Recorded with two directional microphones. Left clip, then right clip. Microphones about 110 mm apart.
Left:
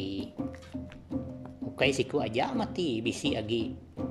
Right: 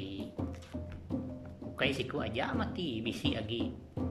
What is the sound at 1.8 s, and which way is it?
Speech, 40° left (ahead or behind).